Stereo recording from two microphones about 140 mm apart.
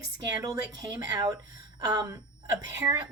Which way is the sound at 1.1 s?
25° right (ahead or behind).